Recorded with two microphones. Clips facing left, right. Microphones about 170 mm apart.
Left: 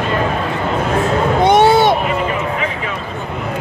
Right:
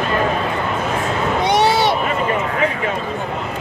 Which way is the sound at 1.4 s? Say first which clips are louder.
Left 6 dB; 50° left (ahead or behind).